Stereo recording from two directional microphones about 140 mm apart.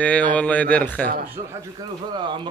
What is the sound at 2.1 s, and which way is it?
Speech, 35° right (ahead or behind).